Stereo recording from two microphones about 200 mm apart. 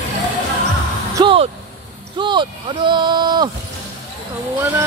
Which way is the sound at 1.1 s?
25° right (ahead or behind).